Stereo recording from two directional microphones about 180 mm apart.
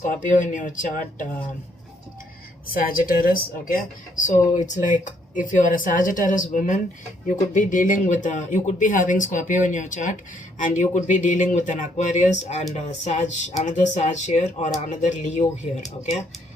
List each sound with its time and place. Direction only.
0.0 s speech: 45° left (ahead or behind)
2.7 s speech: 50° left (ahead or behind)
4.5 s speech: 45° left (ahead or behind)